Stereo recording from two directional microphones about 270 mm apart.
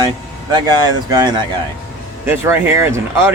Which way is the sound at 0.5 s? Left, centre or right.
Centre.